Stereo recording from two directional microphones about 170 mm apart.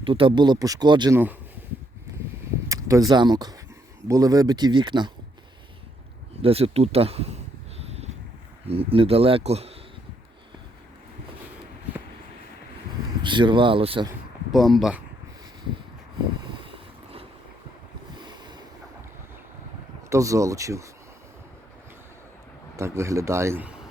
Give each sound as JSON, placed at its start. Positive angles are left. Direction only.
{"t": 0.0, "sound": "speech", "side_deg": -30}
{"t": 1.1, "sound": "speech", "side_deg": -10}
{"t": 2.6, "sound": "speech", "side_deg": -20}
{"t": 6.4, "sound": "speech", "side_deg": -35}
{"t": 7.8, "sound": "a sound", "side_deg": -40}
{"t": 8.6, "sound": "speech", "side_deg": -35}
{"t": 13.2, "sound": "speech", "side_deg": -30}
{"t": 14.5, "sound": "speech", "side_deg": 0}
{"t": 16.5, "sound": "boat", "side_deg": -30}
{"t": 20.1, "sound": "speech", "side_deg": -20}
{"t": 22.8, "sound": "speech", "side_deg": -15}